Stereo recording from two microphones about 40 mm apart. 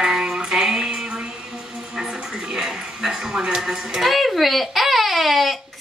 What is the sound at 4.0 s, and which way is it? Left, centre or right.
Speech, centre.